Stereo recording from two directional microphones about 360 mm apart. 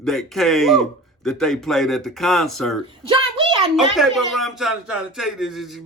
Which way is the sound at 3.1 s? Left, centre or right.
Centre.